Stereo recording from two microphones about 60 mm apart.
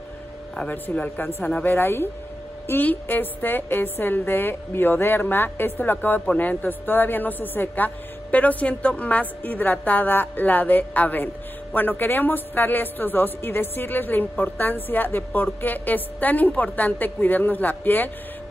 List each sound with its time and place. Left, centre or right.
0.6 s a man's voice: left